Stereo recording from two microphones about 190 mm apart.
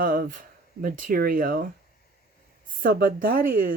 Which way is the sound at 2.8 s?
45° right (ahead or behind).